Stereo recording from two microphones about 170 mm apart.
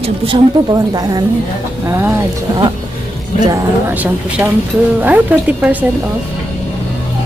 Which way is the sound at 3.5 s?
10° right (ahead or behind).